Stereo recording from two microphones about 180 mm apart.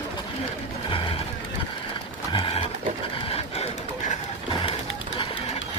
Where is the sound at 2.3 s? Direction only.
30° left (ahead or behind).